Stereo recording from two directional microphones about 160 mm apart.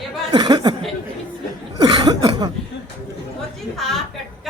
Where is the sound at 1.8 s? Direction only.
30° right (ahead or behind).